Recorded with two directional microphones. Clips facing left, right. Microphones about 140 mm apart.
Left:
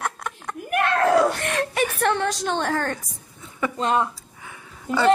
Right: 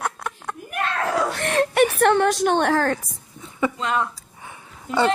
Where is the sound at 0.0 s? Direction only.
5° right (ahead or behind).